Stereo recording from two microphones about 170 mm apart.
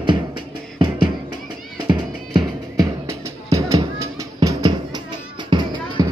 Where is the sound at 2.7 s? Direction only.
20° right (ahead or behind).